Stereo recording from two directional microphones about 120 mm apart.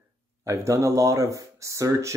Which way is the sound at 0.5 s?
25° right (ahead or behind).